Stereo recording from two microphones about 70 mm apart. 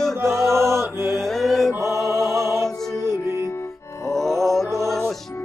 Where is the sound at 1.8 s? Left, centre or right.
Left.